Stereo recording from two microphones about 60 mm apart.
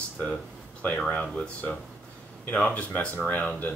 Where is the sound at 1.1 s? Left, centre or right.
Left.